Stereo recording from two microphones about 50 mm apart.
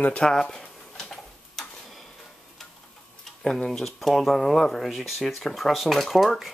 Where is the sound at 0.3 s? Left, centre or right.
Centre.